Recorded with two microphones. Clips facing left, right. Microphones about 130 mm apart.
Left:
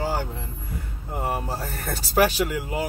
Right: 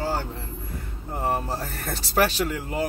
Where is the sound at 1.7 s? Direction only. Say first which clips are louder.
Left 1 dB; 40° left (ahead or behind).